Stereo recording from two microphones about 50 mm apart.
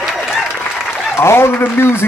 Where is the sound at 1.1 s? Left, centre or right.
Left.